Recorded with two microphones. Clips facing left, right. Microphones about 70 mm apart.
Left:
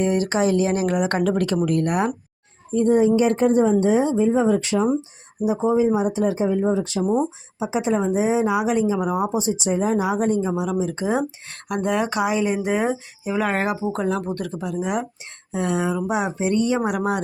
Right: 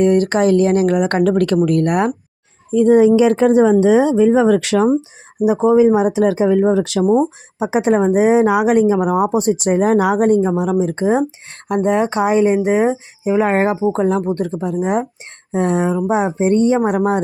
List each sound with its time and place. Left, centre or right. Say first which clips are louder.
0.0 s speech: right 7 dB; right
2.7 s speech: right 6 dB; right
7.6 s speech: right 7 dB; right